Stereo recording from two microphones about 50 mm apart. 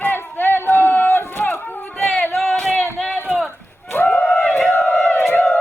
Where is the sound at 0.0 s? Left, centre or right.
Left.